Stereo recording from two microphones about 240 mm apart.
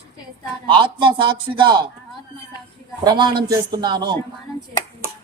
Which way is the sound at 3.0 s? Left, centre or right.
Centre.